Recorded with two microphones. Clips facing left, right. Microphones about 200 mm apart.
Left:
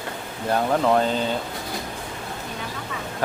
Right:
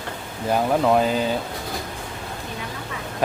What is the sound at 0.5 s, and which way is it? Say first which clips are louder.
Speech: right 1 dB; 10° right (ahead or behind).